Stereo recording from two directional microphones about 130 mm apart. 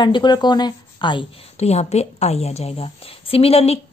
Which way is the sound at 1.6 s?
55° left (ahead or behind).